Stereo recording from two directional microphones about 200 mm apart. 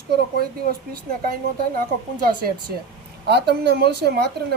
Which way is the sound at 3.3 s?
55° right (ahead or behind).